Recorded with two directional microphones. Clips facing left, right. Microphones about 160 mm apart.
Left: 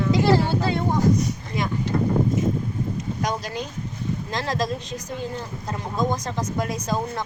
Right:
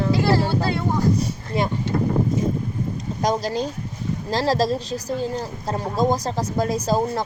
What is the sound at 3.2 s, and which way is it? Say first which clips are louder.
Speech: right 8 dB; 35° right (ahead or behind).